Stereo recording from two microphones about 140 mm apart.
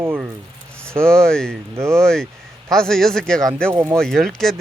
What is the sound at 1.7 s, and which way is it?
Speech, 20° right (ahead or behind).